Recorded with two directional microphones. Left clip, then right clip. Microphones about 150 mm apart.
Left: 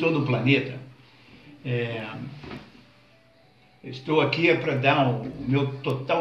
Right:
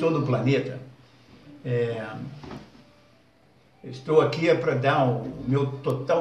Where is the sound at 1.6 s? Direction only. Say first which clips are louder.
Right 3 dB; 20° right (ahead or behind).